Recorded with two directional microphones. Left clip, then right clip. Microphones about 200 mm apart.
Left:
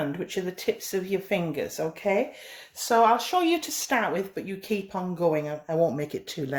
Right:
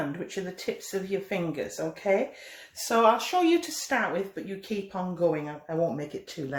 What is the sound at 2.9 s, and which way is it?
Speech, 35° left (ahead or behind).